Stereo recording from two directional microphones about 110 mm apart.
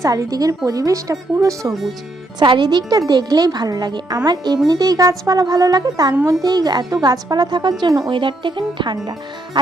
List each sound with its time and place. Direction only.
0.0 s speech: 35° right (ahead or behind)
2.4 s speech: 45° right (ahead or behind)
8.1 s speech: 50° right (ahead or behind)